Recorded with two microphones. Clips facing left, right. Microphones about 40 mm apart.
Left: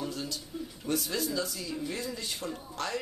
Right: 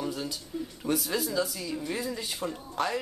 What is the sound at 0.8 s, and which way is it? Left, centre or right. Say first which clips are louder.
Speech: right 2 dB; centre.